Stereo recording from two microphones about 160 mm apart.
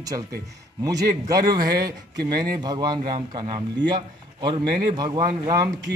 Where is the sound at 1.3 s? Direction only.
25° right (ahead or behind).